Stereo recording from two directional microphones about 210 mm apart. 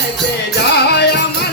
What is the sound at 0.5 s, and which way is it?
Music, 50° left (ahead or behind).